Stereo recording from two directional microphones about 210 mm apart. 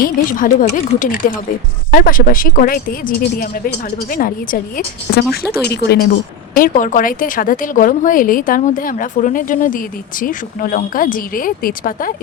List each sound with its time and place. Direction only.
0.0 s a woman's voice: 40° left (ahead or behind)
6.6 s a woman's voice: 40° left (ahead or behind)